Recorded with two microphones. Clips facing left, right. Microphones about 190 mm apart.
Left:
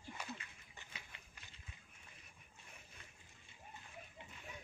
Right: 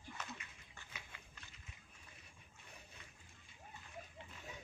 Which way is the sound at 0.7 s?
15° left (ahead or behind).